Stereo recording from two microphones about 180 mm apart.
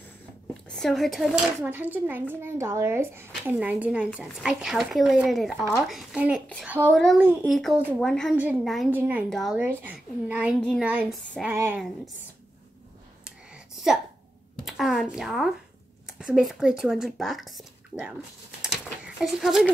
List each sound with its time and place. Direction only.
0.7 s speech: centre (ahead or behind)
7.5 s speech: 5° left (ahead or behind)
9.6 s speech: 10° right (ahead or behind)
14.6 s speech: centre (ahead or behind)
19.1 s speech: centre (ahead or behind)